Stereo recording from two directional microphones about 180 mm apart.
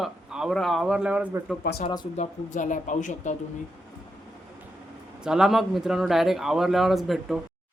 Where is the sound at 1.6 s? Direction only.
60° left (ahead or behind).